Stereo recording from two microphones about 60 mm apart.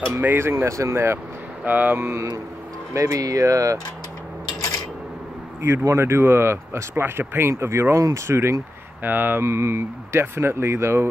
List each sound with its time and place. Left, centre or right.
0.4 s speech: right
0.7 s speech: right
1.6 s speech: right
2.1 s speech: right
5.6 s speech: right
9.0 s speech: right
9.4 s speech: right